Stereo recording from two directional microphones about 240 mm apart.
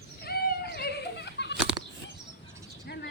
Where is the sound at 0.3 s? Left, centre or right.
Left.